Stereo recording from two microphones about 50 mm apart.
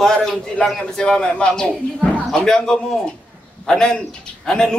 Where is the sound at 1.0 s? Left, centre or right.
Centre.